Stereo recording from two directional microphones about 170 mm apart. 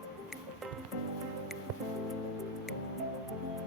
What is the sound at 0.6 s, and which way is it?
Music, centre (ahead or behind).